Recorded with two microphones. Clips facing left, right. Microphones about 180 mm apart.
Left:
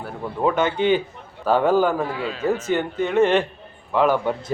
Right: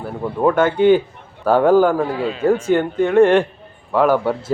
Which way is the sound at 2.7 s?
55° right (ahead or behind).